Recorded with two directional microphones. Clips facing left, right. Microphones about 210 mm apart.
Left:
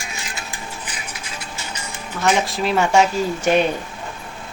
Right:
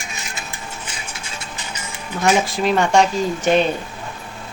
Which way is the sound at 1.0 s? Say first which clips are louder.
Even; 25° right (ahead or behind).